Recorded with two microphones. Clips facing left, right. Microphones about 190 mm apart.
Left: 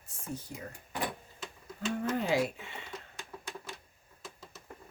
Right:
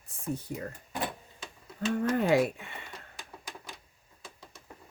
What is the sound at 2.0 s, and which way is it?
Speech, 60° right (ahead or behind).